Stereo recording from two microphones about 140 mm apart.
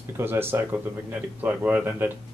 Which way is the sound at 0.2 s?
15° right (ahead or behind).